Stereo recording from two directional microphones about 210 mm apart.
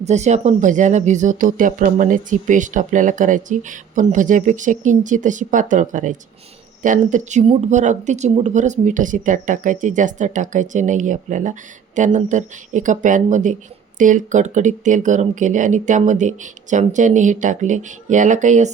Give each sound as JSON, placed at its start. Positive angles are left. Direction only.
{"t": 0.0, "sound": "speech", "side_deg": -35}